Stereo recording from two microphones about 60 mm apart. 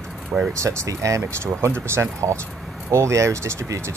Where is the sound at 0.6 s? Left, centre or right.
Right.